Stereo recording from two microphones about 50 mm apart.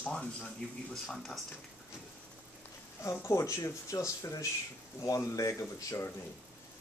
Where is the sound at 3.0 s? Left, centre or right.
Left.